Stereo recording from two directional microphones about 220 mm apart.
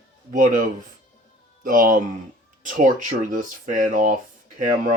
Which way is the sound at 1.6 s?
40° right (ahead or behind).